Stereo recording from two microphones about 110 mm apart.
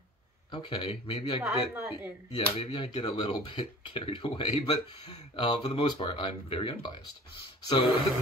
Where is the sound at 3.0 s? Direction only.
45° left (ahead or behind).